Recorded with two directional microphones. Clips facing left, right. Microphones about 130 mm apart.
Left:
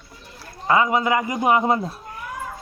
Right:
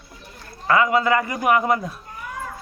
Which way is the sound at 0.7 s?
20° left (ahead or behind).